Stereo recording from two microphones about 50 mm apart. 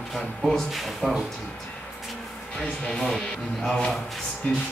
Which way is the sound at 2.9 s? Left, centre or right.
Centre.